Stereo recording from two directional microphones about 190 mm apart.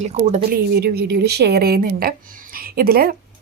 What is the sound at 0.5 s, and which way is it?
A woman's voice, 55° right (ahead or behind).